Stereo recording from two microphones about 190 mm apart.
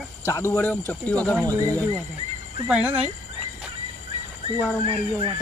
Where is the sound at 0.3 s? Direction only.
15° left (ahead or behind).